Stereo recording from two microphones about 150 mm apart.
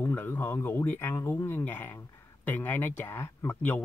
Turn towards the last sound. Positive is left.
turn(degrees=10)  # may be behind; listen again after turning